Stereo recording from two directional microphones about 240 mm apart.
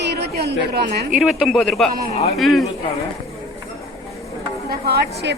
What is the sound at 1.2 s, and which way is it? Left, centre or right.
A woman's voice, centre.